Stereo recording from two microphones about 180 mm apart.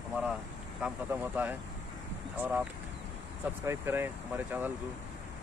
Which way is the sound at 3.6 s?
15° right (ahead or behind).